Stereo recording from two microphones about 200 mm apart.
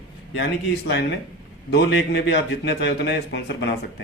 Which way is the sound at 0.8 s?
60° left (ahead or behind).